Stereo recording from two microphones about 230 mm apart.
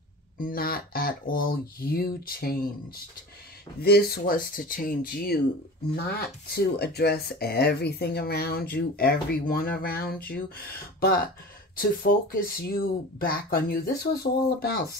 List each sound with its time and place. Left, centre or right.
0.4 s speech: left
3.8 s speech: left